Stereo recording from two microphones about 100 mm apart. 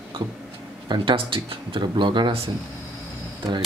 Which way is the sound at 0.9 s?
55° right (ahead or behind).